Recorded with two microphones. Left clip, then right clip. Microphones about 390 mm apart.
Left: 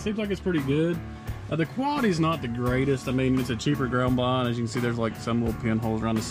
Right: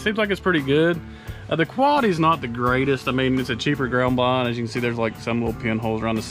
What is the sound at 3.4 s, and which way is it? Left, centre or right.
Speech, right.